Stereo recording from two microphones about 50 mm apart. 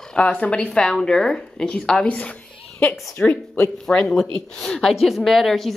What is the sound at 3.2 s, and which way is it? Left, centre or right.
Speech, left.